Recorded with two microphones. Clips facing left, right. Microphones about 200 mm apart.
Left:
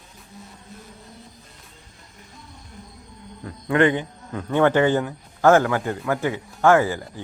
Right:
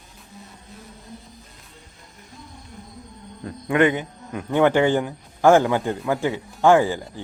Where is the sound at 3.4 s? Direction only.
15° right (ahead or behind).